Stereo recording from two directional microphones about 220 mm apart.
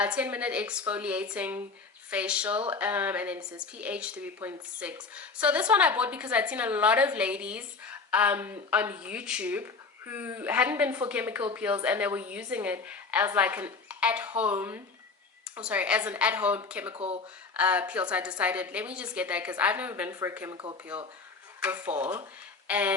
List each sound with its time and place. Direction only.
0.0 s a woman's voice: 5° right (ahead or behind)
16.9 s speech: 25° right (ahead or behind)
17.6 s a woman's voice: 5° right (ahead or behind)